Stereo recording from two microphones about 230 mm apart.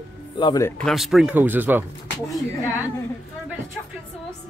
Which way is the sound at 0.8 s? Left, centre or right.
Centre.